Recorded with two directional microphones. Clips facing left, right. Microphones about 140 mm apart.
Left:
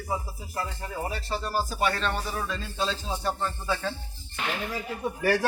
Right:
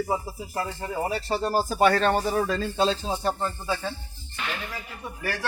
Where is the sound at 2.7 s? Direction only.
35° right (ahead or behind).